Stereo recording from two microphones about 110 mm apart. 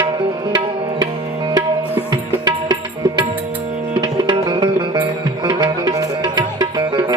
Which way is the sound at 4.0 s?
45° right (ahead or behind).